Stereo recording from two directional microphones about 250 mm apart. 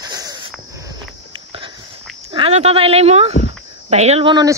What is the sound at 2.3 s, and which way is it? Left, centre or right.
Speech, right.